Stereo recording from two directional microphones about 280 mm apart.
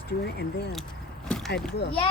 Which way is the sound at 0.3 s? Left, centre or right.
Left.